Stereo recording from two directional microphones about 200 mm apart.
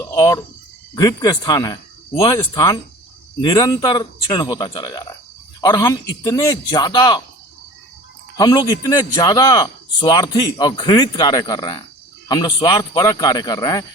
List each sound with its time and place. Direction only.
0.0 s a man's voice: 15° left (ahead or behind)
8.4 s a man's voice: 20° left (ahead or behind)